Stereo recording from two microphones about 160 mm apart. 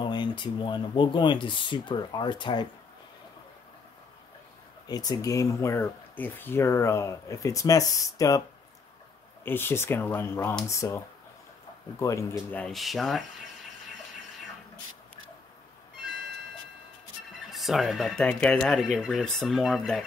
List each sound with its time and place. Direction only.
0.0 s speech: 30° left (ahead or behind)
4.8 s speech: 25° left (ahead or behind)
9.4 s speech: 15° left (ahead or behind)
12.0 s speech: 20° left (ahead or behind); by 13.2 s centre (ahead or behind)
17.5 s speech: centre (ahead or behind)